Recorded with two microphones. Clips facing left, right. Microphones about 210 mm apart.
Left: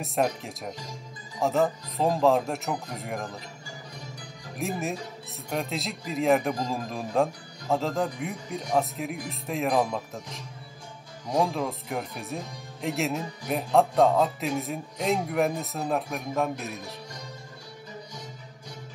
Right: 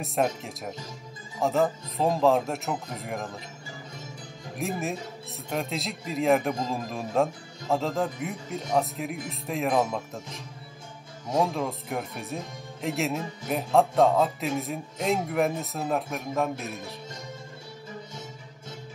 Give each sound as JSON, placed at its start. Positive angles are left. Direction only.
{"t": 0.0, "sound": "speech", "side_deg": 0}
{"t": 4.6, "sound": "speech", "side_deg": 0}